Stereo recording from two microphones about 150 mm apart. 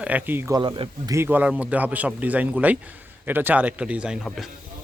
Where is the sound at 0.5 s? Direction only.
30° right (ahead or behind).